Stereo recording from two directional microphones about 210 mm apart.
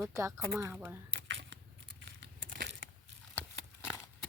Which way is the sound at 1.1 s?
55° right (ahead or behind).